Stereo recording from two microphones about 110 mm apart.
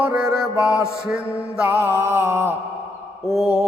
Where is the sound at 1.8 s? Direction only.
20° right (ahead or behind).